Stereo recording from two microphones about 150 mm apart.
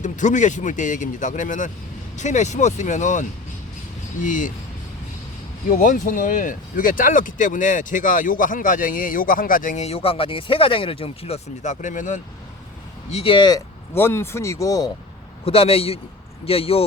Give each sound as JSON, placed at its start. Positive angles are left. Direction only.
{"t": 0.0, "sound": "speech", "side_deg": 55}
{"t": 5.6, "sound": "speech", "side_deg": 65}
{"t": 13.1, "sound": "speech", "side_deg": 40}
{"t": 13.9, "sound": "speech", "side_deg": 15}
{"t": 15.4, "sound": "speech", "side_deg": 40}